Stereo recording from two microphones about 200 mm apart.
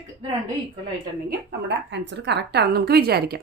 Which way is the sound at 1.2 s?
60° right (ahead or behind).